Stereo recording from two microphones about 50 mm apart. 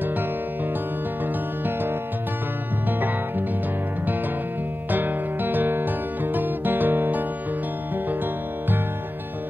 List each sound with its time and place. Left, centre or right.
4.9 s music: right